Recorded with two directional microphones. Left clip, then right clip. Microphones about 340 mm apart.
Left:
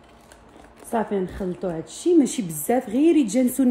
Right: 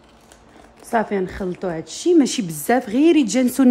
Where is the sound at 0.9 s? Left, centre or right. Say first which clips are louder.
Right 4 dB; centre.